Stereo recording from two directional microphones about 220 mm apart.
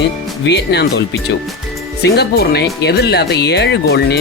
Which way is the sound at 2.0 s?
50° left (ahead or behind).